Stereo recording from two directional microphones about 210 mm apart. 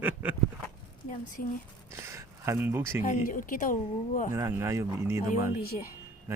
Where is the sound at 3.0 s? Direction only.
40° left (ahead or behind).